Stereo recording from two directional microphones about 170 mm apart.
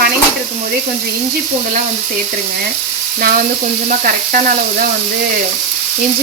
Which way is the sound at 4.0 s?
55° right (ahead or behind).